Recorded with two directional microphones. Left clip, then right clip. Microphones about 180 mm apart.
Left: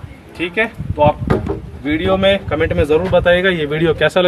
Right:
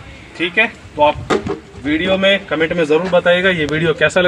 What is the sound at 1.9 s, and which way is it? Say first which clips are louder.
Speech: even; 25° left (ahead or behind).